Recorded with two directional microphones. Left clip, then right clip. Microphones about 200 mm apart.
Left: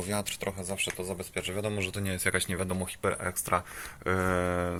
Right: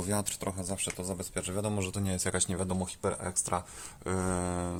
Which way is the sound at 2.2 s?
15° right (ahead or behind).